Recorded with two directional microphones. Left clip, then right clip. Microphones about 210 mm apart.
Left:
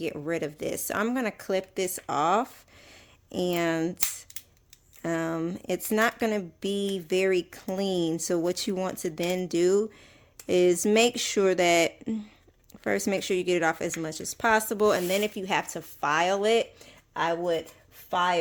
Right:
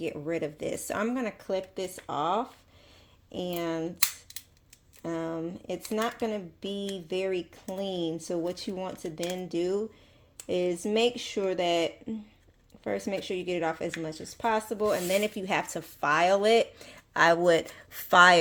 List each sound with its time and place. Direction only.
0.0 s speech: 20° left (ahead or behind)
5.0 s speech: 35° left (ahead or behind)
15.1 s speech: 10° left (ahead or behind); by 17.4 s 10° right (ahead or behind)
17.4 s speech: 20° right (ahead or behind)